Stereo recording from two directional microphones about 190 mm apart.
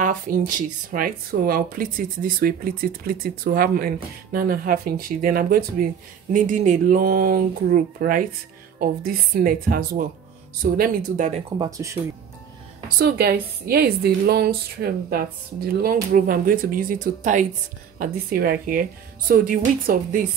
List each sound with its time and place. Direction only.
0.0 s speech: 45° right (ahead or behind)
11.5 s speech: 20° right (ahead or behind)
13.0 s speech: 55° right (ahead or behind)